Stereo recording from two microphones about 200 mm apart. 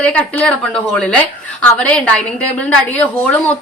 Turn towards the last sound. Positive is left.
turn(degrees=10)  # may be behind; listen again after turning